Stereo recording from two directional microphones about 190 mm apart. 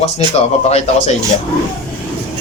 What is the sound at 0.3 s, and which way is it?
Speech, 35° left (ahead or behind).